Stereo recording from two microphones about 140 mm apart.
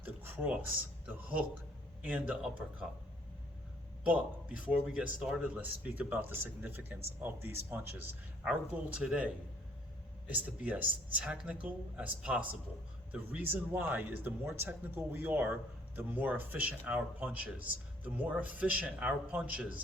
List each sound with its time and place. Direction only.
0.0 s a sound: 10° right (ahead or behind)
1.0 s a man's voice: 10° right (ahead or behind)
4.0 s a man's voice: 10° right (ahead or behind)